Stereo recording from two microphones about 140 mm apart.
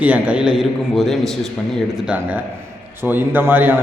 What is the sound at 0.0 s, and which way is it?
A man's voice, 10° right (ahead or behind).